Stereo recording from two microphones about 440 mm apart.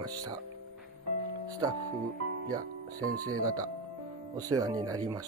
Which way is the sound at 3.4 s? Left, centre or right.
Centre.